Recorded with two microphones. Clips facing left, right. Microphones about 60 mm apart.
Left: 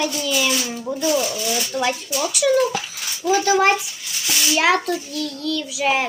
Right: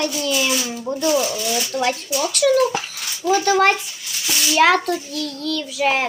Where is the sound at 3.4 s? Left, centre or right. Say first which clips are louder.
Right 1 dB; right.